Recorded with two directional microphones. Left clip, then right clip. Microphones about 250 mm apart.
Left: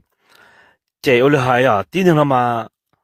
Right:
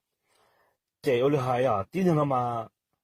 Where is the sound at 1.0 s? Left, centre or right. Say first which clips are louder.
Left 11 dB; left.